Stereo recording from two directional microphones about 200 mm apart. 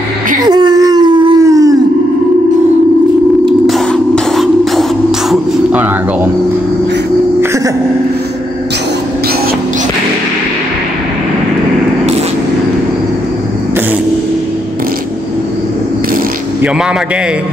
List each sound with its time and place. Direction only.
0.5 s whimper: 20° right (ahead or behind)
3.6 s music: centre (ahead or behind)